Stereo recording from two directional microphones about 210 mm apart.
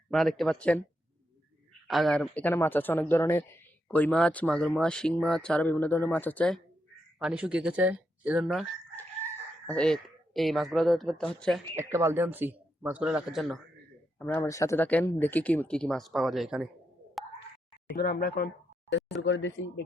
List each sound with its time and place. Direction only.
0.1 s speech: centre (ahead or behind)
1.9 s speech: centre (ahead or behind)
7.2 s speech: 5° right (ahead or behind)
9.0 s speech: 5° left (ahead or behind)
11.8 s speech: 10° right (ahead or behind)
14.2 s speech: 10° left (ahead or behind)
17.9 s speech: 45° left (ahead or behind)
18.9 s speech: 60° left (ahead or behind)